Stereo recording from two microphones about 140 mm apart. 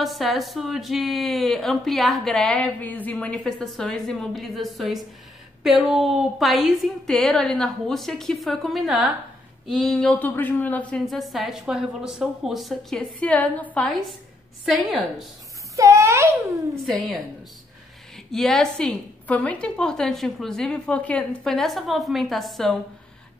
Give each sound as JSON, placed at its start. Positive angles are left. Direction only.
{"t": 0.0, "sound": "speech", "side_deg": 0}
{"t": 14.6, "sound": "speech", "side_deg": 0}
{"t": 15.7, "sound": "speech", "side_deg": -20}
{"t": 18.1, "sound": "speech", "side_deg": 5}